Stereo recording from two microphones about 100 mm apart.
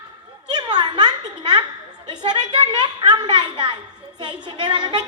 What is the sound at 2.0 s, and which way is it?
A woman's voice, 50° right (ahead or behind).